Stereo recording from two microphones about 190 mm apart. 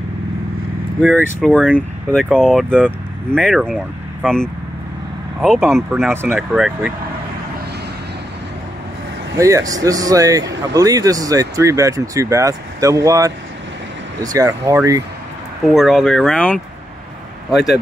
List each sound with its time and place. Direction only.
1.0 s speech: 10° right (ahead or behind)
1.4 s speech: 5° left (ahead or behind)
9.4 s speech: 15° right (ahead or behind)
15.6 s speech: centre (ahead or behind)